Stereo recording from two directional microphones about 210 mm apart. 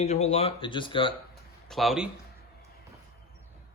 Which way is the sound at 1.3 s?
Centre (ahead or behind).